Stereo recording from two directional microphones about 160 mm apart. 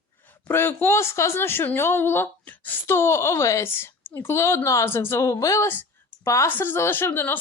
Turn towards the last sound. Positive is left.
turn(degrees=15)  # may be behind; listen again after turning